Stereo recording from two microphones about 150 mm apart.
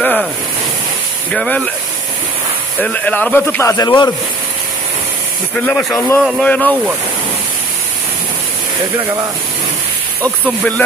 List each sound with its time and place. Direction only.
0.0 s a sound: 10° left (ahead or behind)
1.3 s speech: 5° left (ahead or behind)
2.8 s speech: 10° left (ahead or behind)
5.7 s speech: centre (ahead or behind)
5.9 s speech: 15° left (ahead or behind)